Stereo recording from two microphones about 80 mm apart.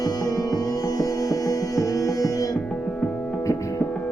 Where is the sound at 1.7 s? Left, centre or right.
Left.